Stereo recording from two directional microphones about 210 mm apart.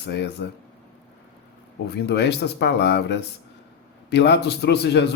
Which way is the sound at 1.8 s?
50° left (ahead or behind).